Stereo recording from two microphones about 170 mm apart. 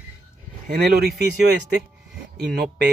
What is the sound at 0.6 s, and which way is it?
Speech, 65° right (ahead or behind).